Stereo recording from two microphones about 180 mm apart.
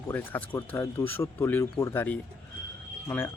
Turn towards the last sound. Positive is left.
turn(degrees=10)  # may be behind; listen again after turning